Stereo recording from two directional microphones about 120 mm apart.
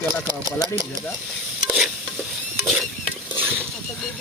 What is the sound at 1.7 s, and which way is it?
Stir, 10° right (ahead or behind).